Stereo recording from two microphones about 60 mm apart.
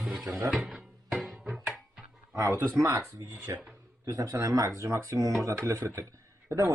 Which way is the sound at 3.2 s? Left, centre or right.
Right.